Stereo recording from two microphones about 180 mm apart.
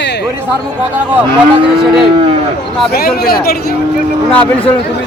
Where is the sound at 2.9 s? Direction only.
60° left (ahead or behind).